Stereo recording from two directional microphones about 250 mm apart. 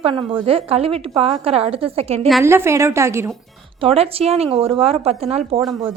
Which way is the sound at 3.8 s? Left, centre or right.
Right.